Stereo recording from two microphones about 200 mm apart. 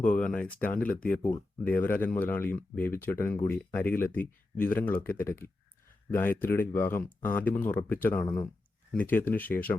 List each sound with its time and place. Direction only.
0.2 s speech: 5° left (ahead or behind)